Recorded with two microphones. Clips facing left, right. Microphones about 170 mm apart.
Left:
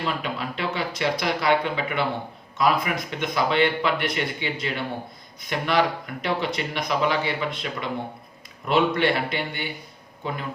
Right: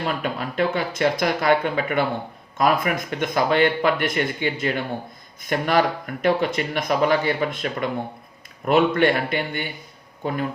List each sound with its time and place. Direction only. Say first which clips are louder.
0.0 s speech: right 2 dB; 50° right (ahead or behind)